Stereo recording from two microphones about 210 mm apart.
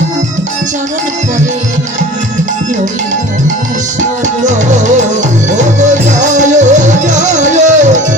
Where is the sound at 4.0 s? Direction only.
35° right (ahead or behind).